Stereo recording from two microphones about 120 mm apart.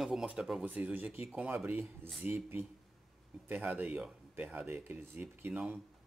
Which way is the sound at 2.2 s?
20° right (ahead or behind).